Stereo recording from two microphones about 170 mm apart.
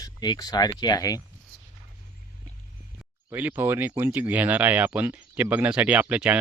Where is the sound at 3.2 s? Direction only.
10° right (ahead or behind).